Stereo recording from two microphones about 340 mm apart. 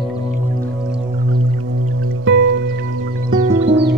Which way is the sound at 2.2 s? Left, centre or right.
Right.